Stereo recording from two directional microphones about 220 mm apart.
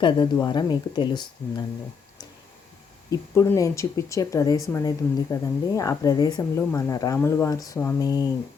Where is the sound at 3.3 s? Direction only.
15° left (ahead or behind).